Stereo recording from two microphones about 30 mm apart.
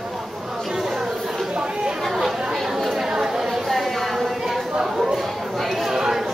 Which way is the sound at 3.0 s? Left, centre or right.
Centre.